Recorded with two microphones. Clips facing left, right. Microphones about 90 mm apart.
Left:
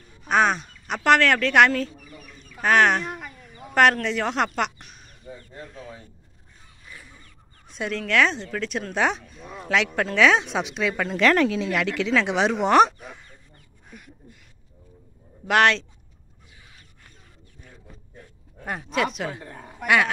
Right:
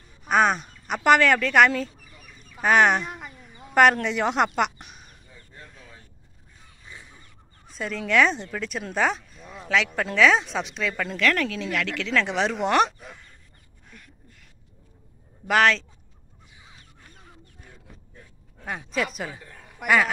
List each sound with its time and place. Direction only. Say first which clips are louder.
0.2 s speech: even; 5° right (ahead or behind)
2.3 s fowl: even; 10° right (ahead or behind)
4.6 s speech: right 2 dB; 10° right (ahead or behind)
6.9 s goose: even; 25° right (ahead or behind)
7.6 s fowl: left 3 dB; centre (ahead or behind)
8.0 s speech: right 1 dB; 5° right (ahead or behind); by 11.1 s 10° left (ahead or behind)
11.1 s speech: left 6 dB; 25° left (ahead or behind)
12.1 s speech: left 2 dB; 5° left (ahead or behind)
13.8 s a sound: left 4 dB; 10° left (ahead or behind)
15.4 s speech: left 1 dB; centre (ahead or behind)
18.6 s speech: left 2 dB; 5° left (ahead or behind)
19.4 s a sound: left 7 dB; 40° left (ahead or behind)
19.8 s a man's voice: even; centre (ahead or behind)